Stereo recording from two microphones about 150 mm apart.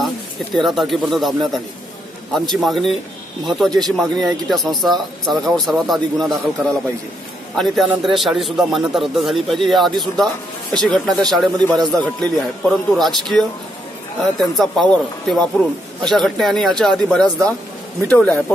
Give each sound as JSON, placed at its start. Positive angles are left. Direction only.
{"t": 0.6, "sound": "a man's voice", "side_deg": 0}
{"t": 8.0, "sound": "a man's voice", "side_deg": 0}